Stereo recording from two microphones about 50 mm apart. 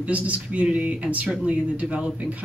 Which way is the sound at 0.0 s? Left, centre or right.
Right.